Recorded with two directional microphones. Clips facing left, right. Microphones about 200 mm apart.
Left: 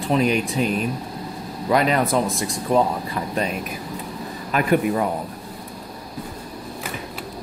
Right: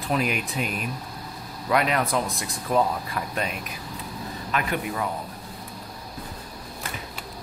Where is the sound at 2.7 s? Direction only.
30° left (ahead or behind).